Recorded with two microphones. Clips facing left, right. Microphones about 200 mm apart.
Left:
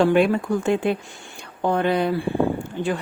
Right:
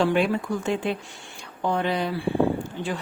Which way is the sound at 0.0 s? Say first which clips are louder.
Left 4 dB; 55° left (ahead or behind).